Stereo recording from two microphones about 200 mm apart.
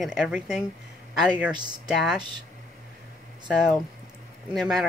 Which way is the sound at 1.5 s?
20° right (ahead or behind).